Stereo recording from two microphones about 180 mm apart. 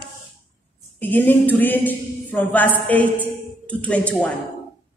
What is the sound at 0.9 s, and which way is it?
A woman's voice, 10° left (ahead or behind).